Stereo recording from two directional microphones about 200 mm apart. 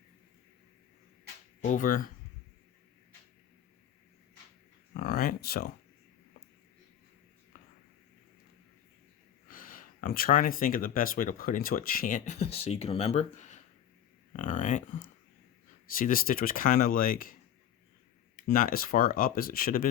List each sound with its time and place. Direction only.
1.6 s speech: 40° left (ahead or behind)
4.9 s speech: 45° left (ahead or behind)
9.5 s speech: 45° left (ahead or behind)
16.0 s speech: 45° left (ahead or behind)
18.4 s speech: 45° left (ahead or behind)